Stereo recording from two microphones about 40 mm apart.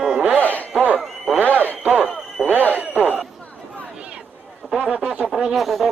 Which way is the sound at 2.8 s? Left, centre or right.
Right.